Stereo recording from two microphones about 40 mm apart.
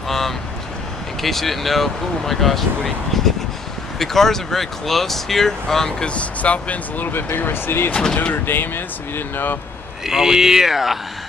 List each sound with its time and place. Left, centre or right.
1.2 s speech: centre
6.0 s speech: left
7.0 s speech: left
7.9 s speech: left
8.5 s speech: left
10.0 s speech: centre